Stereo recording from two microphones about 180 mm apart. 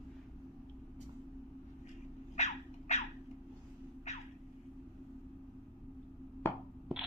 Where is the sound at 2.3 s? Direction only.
40° left (ahead or behind).